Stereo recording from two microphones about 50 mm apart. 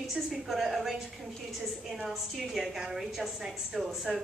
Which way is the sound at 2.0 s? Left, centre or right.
Centre.